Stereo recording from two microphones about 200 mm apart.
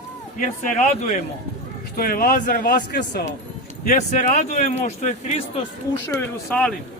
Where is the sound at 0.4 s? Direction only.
35° left (ahead or behind); by 3.2 s 55° left (ahead or behind).